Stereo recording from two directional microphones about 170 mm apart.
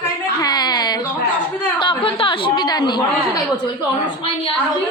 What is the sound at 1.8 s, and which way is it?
A woman's voice, 30° left (ahead or behind).